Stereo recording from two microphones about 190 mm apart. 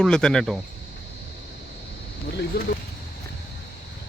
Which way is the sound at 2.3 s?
55° left (ahead or behind).